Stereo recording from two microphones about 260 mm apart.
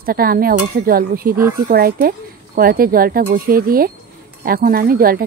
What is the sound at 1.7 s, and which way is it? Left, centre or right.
Speech, right.